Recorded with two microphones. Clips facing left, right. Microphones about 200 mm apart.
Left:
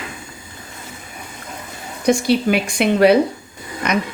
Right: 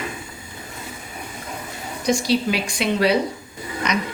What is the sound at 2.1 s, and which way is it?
Speech, 55° left (ahead or behind).